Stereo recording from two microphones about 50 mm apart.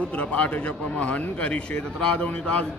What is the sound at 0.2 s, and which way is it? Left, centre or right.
A man's voice, left.